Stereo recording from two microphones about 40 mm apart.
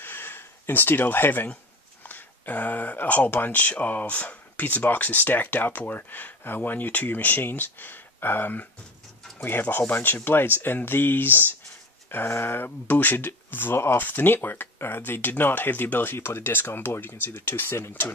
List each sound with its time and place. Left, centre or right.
0.0 s a sound: left
2.0 s speech: left
13.9 s speech: left